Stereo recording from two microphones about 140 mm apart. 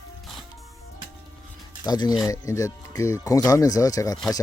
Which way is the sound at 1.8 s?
30° left (ahead or behind).